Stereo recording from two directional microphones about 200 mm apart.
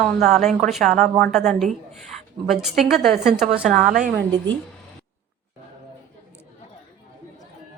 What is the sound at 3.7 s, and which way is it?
Speech, 40° right (ahead or behind).